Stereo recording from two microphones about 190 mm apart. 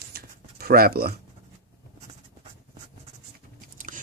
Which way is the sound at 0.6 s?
50° right (ahead or behind).